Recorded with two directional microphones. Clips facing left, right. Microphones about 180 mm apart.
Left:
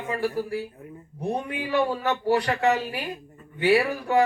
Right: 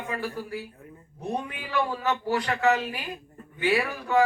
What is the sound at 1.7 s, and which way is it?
Speech, 35° left (ahead or behind).